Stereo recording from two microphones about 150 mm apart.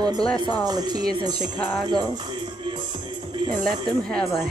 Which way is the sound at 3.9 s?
5° left (ahead or behind).